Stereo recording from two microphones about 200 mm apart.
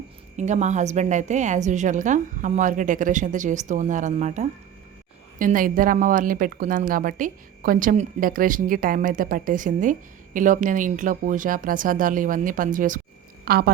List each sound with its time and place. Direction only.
0.3 s a woman's voice: 35° right (ahead or behind)